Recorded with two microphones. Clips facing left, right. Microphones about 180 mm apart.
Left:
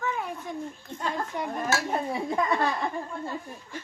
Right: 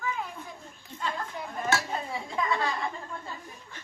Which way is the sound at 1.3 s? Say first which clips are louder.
Even; 65° left (ahead or behind).